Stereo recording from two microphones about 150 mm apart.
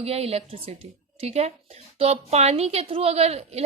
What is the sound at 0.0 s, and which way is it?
A woman's voice, 40° right (ahead or behind).